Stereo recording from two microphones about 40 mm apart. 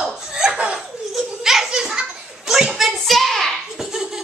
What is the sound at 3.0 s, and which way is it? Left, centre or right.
Hands, centre.